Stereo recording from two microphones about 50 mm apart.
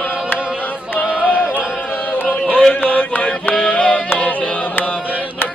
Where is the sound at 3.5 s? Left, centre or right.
Centre.